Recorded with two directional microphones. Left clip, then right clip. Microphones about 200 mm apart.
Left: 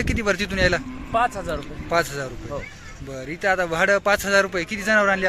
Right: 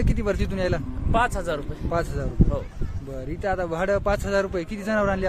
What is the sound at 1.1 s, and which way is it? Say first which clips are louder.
Speech: left 1 dB; 25° right (ahead or behind).